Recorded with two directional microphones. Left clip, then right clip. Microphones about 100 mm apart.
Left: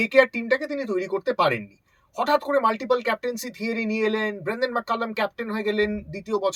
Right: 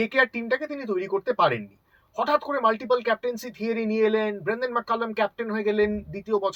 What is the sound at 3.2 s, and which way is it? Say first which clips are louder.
Speech: even; 30° left (ahead or behind).